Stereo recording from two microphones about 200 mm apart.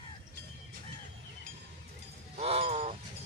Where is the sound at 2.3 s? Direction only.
30° right (ahead or behind).